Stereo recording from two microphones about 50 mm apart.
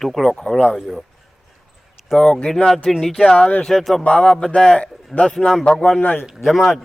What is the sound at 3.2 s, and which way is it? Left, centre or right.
Speech, left.